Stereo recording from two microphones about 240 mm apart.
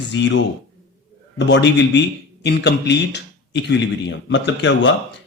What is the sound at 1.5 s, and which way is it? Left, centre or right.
A man's voice, left.